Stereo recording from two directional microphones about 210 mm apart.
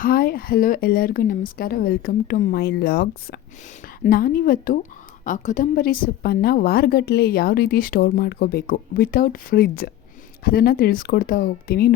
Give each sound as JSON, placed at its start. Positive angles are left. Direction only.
{"t": 0.0, "sound": "a woman's voice", "side_deg": 45}